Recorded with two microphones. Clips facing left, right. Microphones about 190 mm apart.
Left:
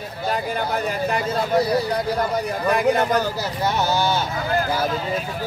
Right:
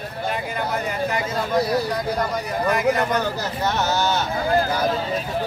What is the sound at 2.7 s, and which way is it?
Speech, 35° left (ahead or behind).